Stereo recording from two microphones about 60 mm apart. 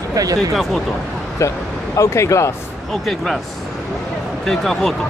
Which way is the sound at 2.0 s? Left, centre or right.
Left.